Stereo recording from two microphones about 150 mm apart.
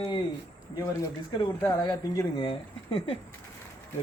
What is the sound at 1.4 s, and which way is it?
Speech, 25° left (ahead or behind).